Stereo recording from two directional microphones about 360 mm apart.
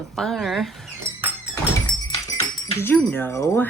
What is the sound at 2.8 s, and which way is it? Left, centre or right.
Speech, centre.